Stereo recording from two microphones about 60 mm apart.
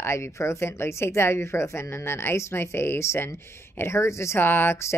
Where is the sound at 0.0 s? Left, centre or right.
Left.